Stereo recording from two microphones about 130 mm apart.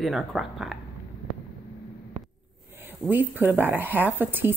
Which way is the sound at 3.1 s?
15° right (ahead or behind).